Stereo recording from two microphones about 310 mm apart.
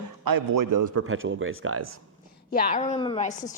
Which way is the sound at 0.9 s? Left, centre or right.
Right.